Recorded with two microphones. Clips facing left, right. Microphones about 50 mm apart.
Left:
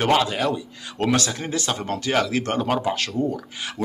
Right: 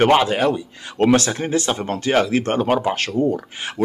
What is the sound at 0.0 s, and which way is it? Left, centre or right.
Speech, right.